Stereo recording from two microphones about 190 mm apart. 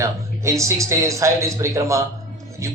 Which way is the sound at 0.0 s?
15° right (ahead or behind).